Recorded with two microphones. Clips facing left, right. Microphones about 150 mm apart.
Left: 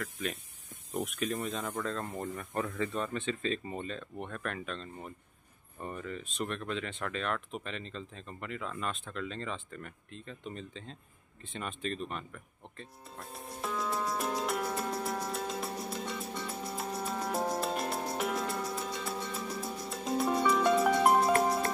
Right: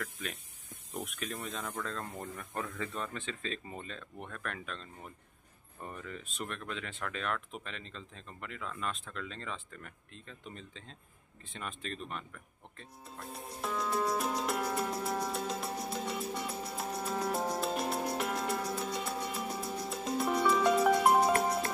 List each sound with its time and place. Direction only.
1.2 s speech: 15° left (ahead or behind)
2.8 s speech: centre (ahead or behind)
6.0 s speech: centre (ahead or behind)
12.7 s music: centre (ahead or behind)